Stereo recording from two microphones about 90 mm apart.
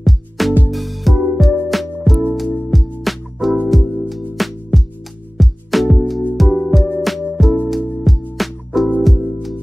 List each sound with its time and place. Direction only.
0.0 s music: centre (ahead or behind)